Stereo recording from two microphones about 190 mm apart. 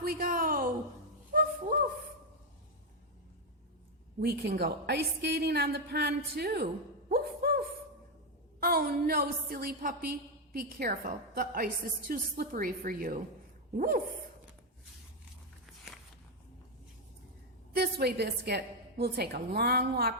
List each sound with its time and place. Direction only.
0.0 s a woman's voice: 50° right (ahead or behind)
1.3 s a sound: 50° right (ahead or behind)
4.2 s a woman's voice: 60° right (ahead or behind)
7.1 s a sound: 55° right (ahead or behind)
8.6 s a woman's voice: 55° right (ahead or behind)
17.7 s a woman's voice: 60° right (ahead or behind)